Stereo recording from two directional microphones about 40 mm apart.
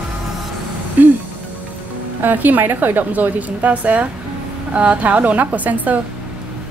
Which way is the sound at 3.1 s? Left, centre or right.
Right.